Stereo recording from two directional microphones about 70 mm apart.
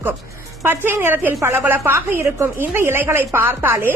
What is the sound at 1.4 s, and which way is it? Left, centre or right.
Speech, right.